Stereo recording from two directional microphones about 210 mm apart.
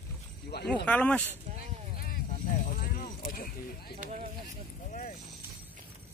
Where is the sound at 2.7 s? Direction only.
45° left (ahead or behind).